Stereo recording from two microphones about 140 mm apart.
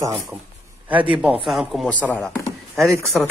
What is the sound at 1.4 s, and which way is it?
Speech, centre (ahead or behind).